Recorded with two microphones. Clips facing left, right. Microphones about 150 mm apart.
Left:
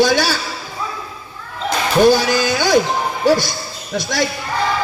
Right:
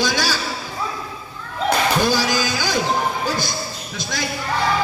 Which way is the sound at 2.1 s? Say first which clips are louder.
Left 6 dB; 60° left (ahead or behind).